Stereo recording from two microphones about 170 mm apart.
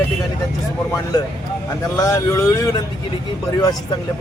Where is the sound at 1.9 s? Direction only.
20° left (ahead or behind).